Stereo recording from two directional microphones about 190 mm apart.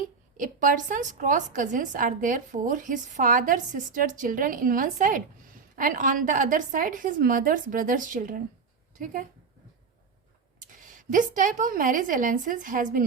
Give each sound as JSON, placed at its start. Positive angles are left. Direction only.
{"t": 0.3, "sound": "a woman's voice", "side_deg": -45}
{"t": 10.8, "sound": "a woman's voice", "side_deg": -45}